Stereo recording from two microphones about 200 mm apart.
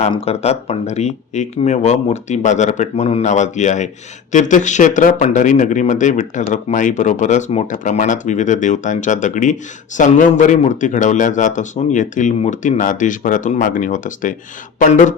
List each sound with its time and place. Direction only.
0.0 s speech: 30° left (ahead or behind)